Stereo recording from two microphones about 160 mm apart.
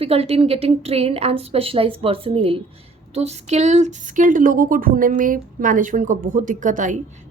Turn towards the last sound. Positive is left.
turn(degrees=-50)  # may be behind; listen again after turning